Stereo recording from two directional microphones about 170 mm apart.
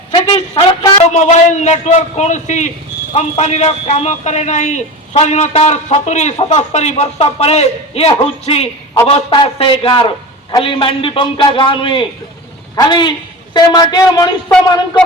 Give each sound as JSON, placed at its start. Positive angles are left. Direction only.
{"t": 0.1, "sound": "a man's voice", "side_deg": 35}